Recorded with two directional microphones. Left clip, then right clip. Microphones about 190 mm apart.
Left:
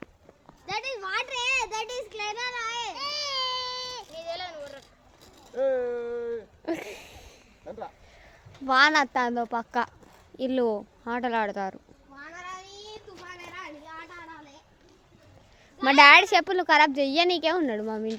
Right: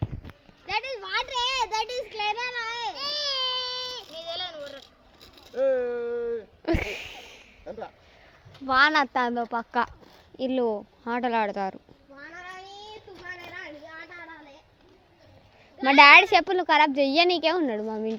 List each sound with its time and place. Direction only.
0.7 s speech: 20° left (ahead or behind)
1.1 s a child's voice: 5° left (ahead or behind)
3.0 s baby cry: 10° left (ahead or behind)
4.0 s a sound: 25° right (ahead or behind); by 6.4 s 40° right (ahead or behind)
6.7 s a sound: 15° right (ahead or behind)
7.7 s speech: 40° right (ahead or behind)
8.6 s speech: centre (ahead or behind)
13.3 s a sound: 30° left (ahead or behind)
15.8 s a woman's voice: 5° right (ahead or behind)